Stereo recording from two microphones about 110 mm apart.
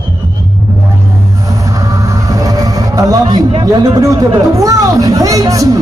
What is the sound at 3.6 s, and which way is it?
Speech, 35° right (ahead or behind).